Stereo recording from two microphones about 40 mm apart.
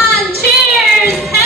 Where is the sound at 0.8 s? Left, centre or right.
Centre.